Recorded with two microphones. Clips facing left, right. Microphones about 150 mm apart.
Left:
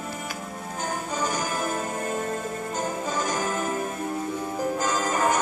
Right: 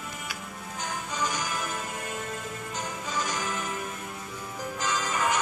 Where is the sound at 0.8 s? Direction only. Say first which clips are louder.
Left 4 dB; 45° left (ahead or behind).